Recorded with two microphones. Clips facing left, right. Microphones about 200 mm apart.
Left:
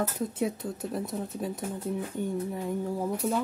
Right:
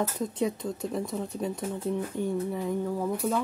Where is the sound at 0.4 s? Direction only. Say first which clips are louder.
Right 3 dB; 5° left (ahead or behind).